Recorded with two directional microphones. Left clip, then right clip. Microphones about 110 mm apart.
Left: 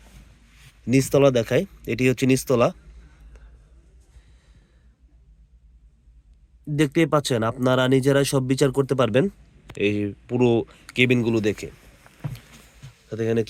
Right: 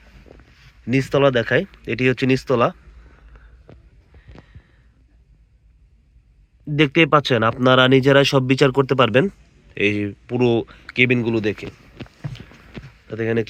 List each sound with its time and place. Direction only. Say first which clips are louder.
0.9 s speech: right 1 dB; 25° left (ahead or behind)
3.3 s a sound: right 2 dB; 15° left (ahead or behind)
6.7 s speech: right 5 dB; 10° right (ahead or behind); by 11.7 s 10° left (ahead or behind)
13.1 s speech: right 2 dB; 15° left (ahead or behind)